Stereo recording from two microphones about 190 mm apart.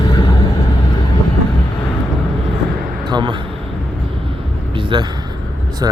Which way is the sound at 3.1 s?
25° right (ahead or behind).